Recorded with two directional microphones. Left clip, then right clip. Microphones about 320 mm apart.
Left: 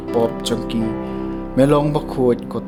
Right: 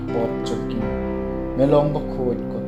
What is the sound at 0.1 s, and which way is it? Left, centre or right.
Speech, left.